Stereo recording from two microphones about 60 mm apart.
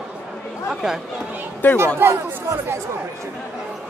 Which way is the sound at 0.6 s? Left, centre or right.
Centre.